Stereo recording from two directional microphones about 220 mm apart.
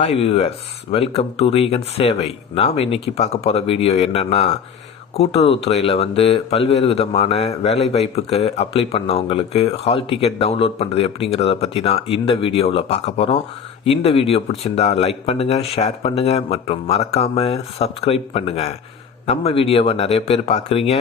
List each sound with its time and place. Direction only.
0.0 s speech: 25° left (ahead or behind)